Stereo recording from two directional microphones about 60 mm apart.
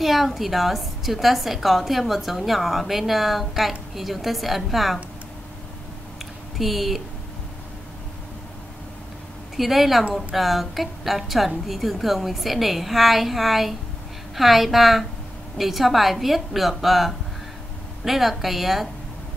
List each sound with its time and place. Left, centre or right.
0.0 s a woman's voice: centre
6.1 s a sound: centre
9.6 s a woman's voice: centre